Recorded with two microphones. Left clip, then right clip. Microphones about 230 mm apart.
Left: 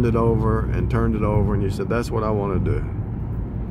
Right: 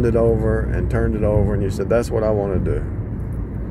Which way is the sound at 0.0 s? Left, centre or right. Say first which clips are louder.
Right 3 dB; centre.